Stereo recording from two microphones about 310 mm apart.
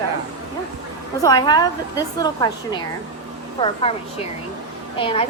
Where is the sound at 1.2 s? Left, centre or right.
Centre.